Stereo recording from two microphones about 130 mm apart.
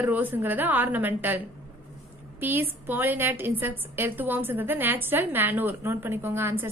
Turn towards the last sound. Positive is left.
turn(degrees=-15)  # may be behind; listen again after turning